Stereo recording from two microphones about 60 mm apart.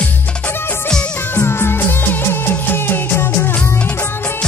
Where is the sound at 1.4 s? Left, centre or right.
Left.